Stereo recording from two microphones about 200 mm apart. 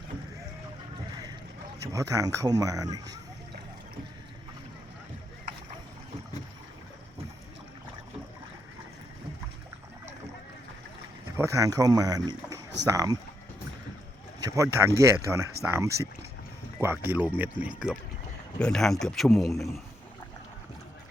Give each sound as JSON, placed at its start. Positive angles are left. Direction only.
{"t": 1.9, "sound": "speech", "side_deg": -15}
{"t": 11.3, "sound": "speech", "side_deg": -15}
{"t": 14.4, "sound": "a man's voice", "side_deg": -15}